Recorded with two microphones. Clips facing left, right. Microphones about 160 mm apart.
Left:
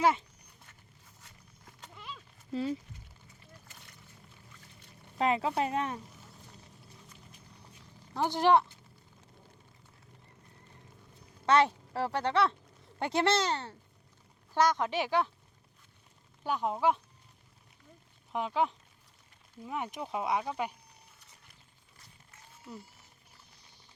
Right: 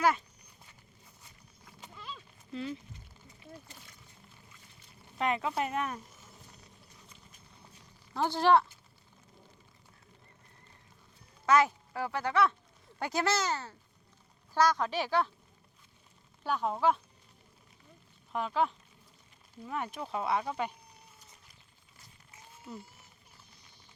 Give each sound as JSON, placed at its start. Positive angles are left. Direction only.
{"t": 0.0, "sound": "speech", "side_deg": 25}
{"t": 2.5, "sound": "speech", "side_deg": 40}
{"t": 5.1, "sound": "speech", "side_deg": 30}
{"t": 8.1, "sound": "speech", "side_deg": 15}
{"t": 11.4, "sound": "speech", "side_deg": 30}
{"t": 16.4, "sound": "speech", "side_deg": 15}
{"t": 18.3, "sound": "speech", "side_deg": 15}